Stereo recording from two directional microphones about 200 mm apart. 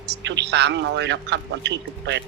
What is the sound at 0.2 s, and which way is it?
A man's voice, 60° right (ahead or behind).